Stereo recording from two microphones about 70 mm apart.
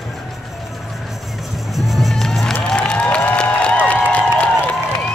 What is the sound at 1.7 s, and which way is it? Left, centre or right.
Music, centre.